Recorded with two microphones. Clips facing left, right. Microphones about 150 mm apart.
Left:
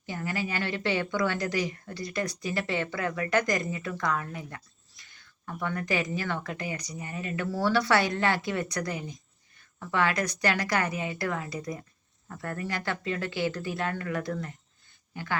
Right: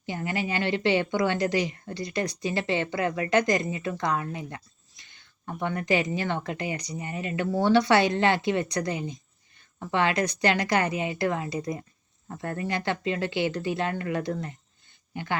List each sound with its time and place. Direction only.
0.0 s speech: 25° right (ahead or behind)